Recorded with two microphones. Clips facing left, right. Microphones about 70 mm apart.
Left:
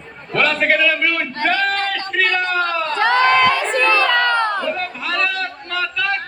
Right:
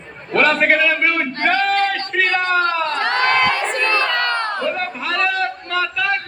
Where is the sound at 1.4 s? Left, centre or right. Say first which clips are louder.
Right 1 dB; right.